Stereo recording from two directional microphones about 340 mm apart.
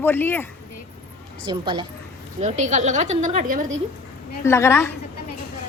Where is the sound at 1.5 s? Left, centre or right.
Centre.